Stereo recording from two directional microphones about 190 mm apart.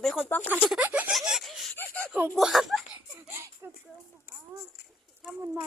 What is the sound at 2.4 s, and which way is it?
Laughter, centre (ahead or behind).